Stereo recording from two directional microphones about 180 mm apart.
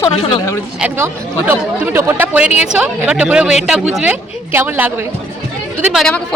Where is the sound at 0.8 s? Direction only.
10° right (ahead or behind).